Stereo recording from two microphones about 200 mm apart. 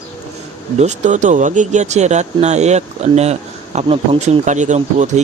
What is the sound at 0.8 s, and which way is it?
Speech, 35° right (ahead or behind).